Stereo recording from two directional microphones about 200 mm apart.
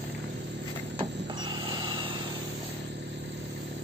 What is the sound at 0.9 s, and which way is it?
Vehicle, 25° right (ahead or behind).